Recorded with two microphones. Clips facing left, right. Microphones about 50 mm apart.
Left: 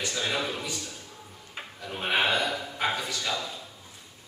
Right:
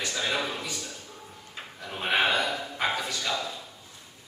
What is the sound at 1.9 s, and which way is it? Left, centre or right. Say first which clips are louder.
A man's voice: right 1 dB; centre.